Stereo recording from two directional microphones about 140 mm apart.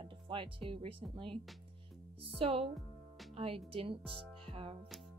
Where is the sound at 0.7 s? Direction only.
40° right (ahead or behind).